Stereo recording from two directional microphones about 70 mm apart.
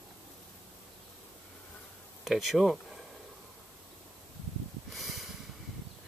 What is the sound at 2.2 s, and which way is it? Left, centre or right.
Speech, centre.